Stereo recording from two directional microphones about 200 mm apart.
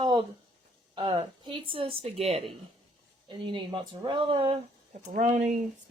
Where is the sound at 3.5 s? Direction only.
25° right (ahead or behind).